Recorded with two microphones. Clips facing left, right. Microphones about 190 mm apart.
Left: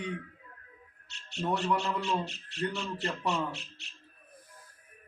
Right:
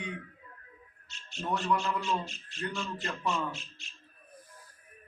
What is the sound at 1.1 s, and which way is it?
A man's voice, 65° left (ahead or behind).